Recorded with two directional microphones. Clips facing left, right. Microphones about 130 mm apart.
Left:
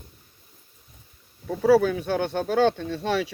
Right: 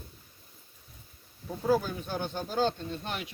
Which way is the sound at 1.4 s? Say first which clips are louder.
Left 9 dB; 75° left (ahead or behind).